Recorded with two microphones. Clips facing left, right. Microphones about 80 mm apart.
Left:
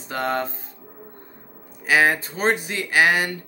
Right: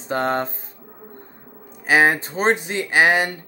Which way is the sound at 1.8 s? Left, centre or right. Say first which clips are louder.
Right 2 dB; right.